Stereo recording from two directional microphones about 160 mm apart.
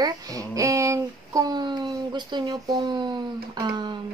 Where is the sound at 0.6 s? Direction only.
20° right (ahead or behind).